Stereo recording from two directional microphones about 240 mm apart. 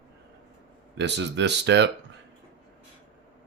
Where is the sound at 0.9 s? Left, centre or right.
Right.